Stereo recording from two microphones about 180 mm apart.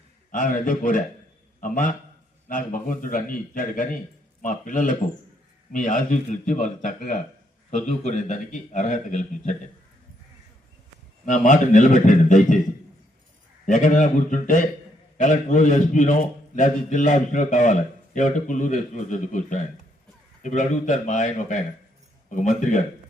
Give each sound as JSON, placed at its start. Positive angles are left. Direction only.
{"t": 0.3, "sound": "a man's voice", "side_deg": 50}
{"t": 11.3, "sound": "a man's voice", "side_deg": 45}
{"t": 13.7, "sound": "a man's voice", "side_deg": 45}